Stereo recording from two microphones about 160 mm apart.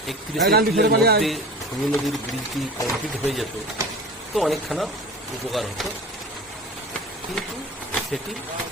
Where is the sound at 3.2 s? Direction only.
Centre (ahead or behind).